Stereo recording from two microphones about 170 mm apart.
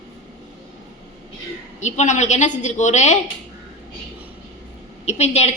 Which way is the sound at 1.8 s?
45° left (ahead or behind).